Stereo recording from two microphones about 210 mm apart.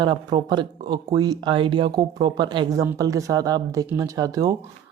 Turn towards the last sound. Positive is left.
turn(degrees=-15)  # may be behind; listen again after turning